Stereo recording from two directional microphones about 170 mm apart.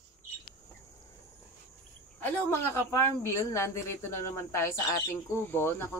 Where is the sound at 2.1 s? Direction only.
10° left (ahead or behind).